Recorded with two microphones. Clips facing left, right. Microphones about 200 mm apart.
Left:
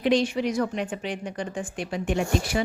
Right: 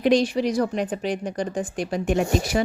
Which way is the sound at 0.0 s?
40° right (ahead or behind).